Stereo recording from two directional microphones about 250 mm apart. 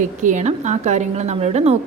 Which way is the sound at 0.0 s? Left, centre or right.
Right.